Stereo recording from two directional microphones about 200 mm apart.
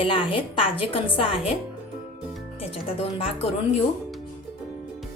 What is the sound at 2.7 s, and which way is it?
Speech, 30° left (ahead or behind).